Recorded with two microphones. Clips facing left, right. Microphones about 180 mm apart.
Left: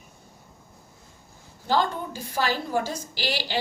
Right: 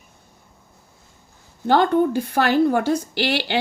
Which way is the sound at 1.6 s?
60° right (ahead or behind).